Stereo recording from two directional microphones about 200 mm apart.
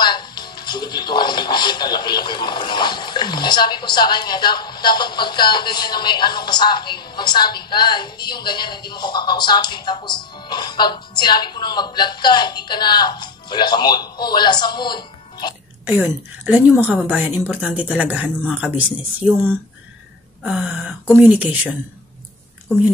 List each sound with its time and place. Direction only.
0.0 s speech: 20° left (ahead or behind)
16.0 s a woman's voice: 10° right (ahead or behind)
20.4 s a sound: 5° right (ahead or behind)
21.2 s a woman's voice: 10° right (ahead or behind)